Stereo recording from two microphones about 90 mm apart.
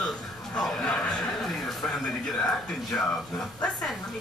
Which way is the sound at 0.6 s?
10° left (ahead or behind).